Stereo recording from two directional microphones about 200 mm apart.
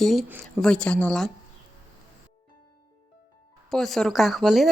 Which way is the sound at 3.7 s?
Centre (ahead or behind).